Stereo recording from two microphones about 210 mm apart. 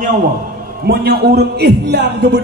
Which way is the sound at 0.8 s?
50° right (ahead or behind).